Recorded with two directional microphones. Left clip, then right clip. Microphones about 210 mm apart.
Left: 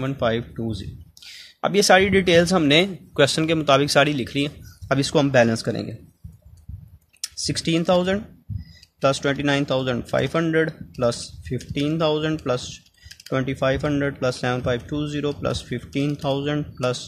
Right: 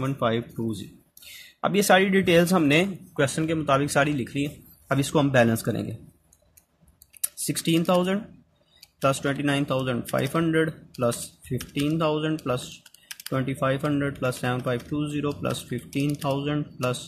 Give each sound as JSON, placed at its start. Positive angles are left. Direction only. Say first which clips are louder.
{"t": 0.1, "sound": "speech", "louder": "left 4 dB", "side_deg": 10}
{"t": 3.2, "sound": "speech", "louder": "left 6 dB", "side_deg": 30}
{"t": 7.3, "sound": "speech", "louder": "left 2 dB", "side_deg": 15}